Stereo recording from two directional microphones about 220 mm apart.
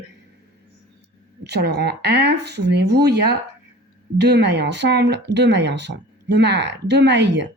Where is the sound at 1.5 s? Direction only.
50° right (ahead or behind).